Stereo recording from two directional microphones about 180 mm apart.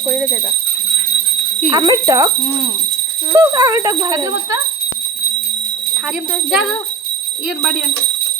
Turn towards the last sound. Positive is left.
turn(degrees=0)  # may be behind; listen again after turning